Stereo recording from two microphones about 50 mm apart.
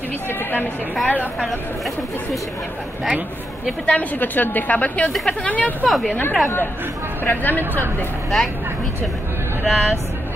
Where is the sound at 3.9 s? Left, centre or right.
Left.